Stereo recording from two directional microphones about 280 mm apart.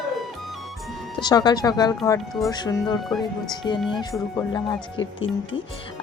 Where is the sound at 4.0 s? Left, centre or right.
Centre.